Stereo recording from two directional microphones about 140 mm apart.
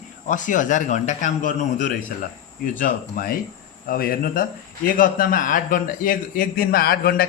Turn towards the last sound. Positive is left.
turn(degrees=90)